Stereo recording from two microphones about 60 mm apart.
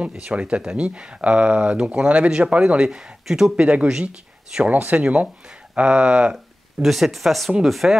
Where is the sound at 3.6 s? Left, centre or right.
Centre.